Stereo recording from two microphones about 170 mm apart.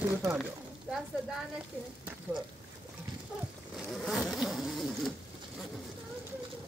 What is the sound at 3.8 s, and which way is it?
Vehicle, centre (ahead or behind).